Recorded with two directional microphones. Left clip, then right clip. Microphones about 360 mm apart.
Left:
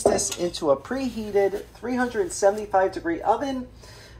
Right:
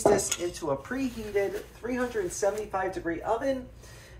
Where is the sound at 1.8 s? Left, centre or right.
Left.